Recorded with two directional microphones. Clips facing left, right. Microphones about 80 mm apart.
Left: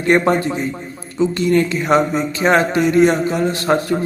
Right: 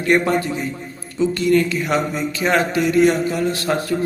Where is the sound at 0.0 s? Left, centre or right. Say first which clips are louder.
Left 3 dB; left.